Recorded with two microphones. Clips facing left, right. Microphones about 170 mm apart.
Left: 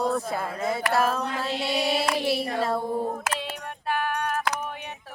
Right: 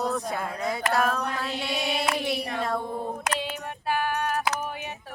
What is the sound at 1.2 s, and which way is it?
Mantra, 30° left (ahead or behind).